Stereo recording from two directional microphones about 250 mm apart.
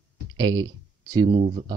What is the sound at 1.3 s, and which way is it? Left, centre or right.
Speech, right.